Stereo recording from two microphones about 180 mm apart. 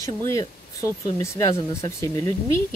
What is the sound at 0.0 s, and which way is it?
Speech, 15° left (ahead or behind).